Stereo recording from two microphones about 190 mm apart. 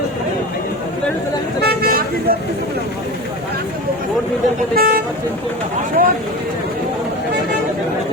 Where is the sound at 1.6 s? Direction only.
50° right (ahead or behind).